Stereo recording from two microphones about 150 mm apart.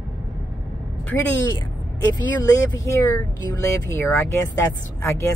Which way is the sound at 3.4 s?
20° left (ahead or behind).